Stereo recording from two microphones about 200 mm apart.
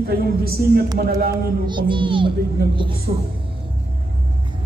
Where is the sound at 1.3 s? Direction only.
25° right (ahead or behind).